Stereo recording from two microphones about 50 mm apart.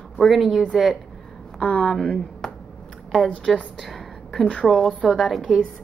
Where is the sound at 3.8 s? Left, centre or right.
Centre.